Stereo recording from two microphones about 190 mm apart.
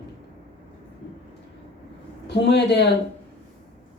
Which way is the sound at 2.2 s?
65° left (ahead or behind).